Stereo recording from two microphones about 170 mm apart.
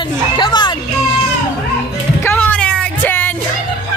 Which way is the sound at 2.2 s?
10° left (ahead or behind).